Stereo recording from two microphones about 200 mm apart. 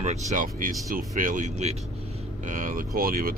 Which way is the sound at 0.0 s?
35° right (ahead or behind).